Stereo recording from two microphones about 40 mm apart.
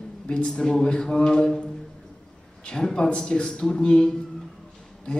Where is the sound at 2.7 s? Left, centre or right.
Centre.